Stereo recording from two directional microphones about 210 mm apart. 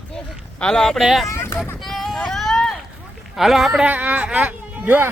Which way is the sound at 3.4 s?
Centre (ahead or behind).